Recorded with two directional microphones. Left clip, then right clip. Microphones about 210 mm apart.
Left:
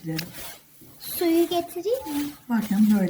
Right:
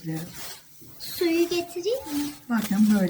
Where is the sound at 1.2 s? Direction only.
45° left (ahead or behind).